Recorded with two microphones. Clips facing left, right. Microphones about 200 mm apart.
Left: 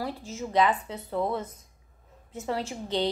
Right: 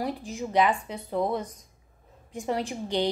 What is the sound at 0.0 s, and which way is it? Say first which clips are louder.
Speech: right 2 dB; 15° right (ahead or behind).